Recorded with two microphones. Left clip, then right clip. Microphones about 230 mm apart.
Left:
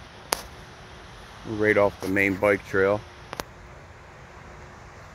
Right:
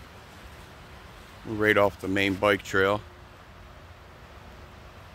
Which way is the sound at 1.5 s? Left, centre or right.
Centre.